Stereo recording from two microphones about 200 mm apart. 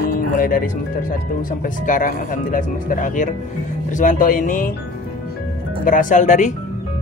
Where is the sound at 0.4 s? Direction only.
45° left (ahead or behind).